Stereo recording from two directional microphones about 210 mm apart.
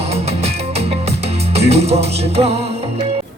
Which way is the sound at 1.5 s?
30° right (ahead or behind).